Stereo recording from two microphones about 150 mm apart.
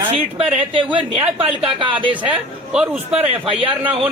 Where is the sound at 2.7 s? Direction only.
10° right (ahead or behind).